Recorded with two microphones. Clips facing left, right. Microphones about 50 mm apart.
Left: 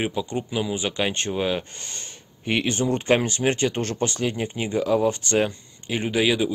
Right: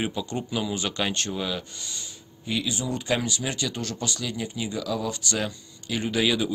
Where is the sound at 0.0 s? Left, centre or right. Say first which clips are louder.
Left 3 dB; centre.